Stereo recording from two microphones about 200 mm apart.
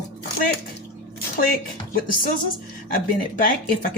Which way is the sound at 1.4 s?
45° left (ahead or behind).